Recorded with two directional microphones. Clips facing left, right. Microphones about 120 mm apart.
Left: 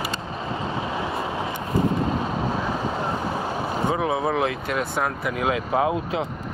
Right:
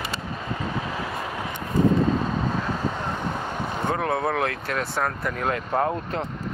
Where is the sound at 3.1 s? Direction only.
5° left (ahead or behind).